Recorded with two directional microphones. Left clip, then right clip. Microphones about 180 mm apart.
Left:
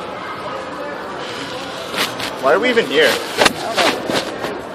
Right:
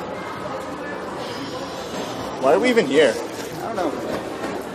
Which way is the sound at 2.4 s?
15° right (ahead or behind).